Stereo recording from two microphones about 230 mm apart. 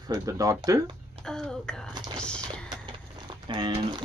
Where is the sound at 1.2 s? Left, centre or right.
Centre.